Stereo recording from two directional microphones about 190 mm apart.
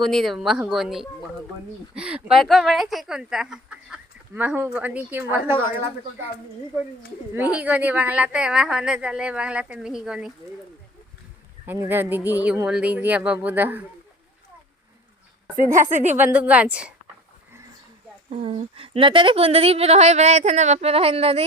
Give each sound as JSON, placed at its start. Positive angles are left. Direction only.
{"t": 0.0, "sound": "speech", "side_deg": 0}
{"t": 7.3, "sound": "speech", "side_deg": -10}
{"t": 11.6, "sound": "speech", "side_deg": -10}
{"t": 15.5, "sound": "a woman's voice", "side_deg": -45}
{"t": 16.1, "sound": "speech", "side_deg": -10}
{"t": 18.3, "sound": "a woman's voice", "side_deg": -30}